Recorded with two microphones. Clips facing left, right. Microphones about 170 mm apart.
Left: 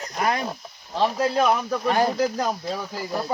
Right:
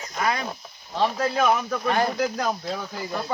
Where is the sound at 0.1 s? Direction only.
40° left (ahead or behind).